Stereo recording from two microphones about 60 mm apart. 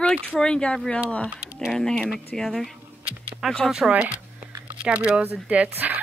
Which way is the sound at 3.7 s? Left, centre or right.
Centre.